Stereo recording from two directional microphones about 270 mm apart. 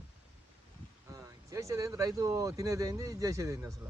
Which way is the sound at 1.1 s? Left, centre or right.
Centre.